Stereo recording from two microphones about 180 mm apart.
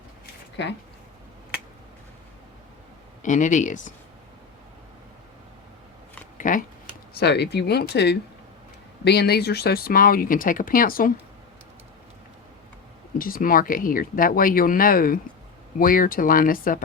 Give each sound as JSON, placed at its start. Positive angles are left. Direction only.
{"t": 0.6, "sound": "speech", "side_deg": 80}
{"t": 3.2, "sound": "speech", "side_deg": 45}
{"t": 6.3, "sound": "a sound", "side_deg": 45}
{"t": 7.1, "sound": "speech", "side_deg": 65}
{"t": 13.1, "sound": "speech", "side_deg": 50}